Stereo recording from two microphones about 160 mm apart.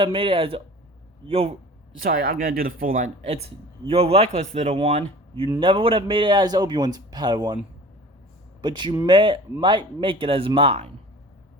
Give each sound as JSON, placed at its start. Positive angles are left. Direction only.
{"t": 0.0, "sound": "speech", "side_deg": -30}
{"t": 2.0, "sound": "speech", "side_deg": -70}
{"t": 3.2, "sound": "speech", "side_deg": -40}
{"t": 5.5, "sound": "a man's voice", "side_deg": -30}
{"t": 8.6, "sound": "a man's voice", "side_deg": -30}